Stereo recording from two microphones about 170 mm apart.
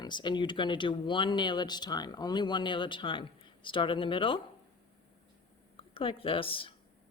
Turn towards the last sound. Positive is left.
turn(degrees=30)  # may be behind; listen again after turning